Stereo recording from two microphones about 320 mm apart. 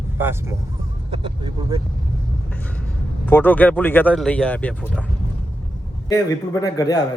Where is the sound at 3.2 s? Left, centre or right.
Centre.